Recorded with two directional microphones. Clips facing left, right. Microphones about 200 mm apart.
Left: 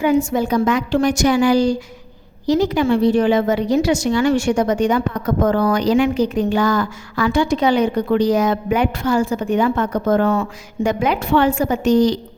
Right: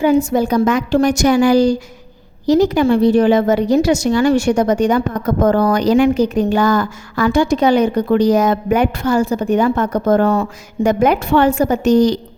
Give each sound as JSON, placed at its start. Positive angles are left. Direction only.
{"t": 0.0, "sound": "a woman's voice", "side_deg": -35}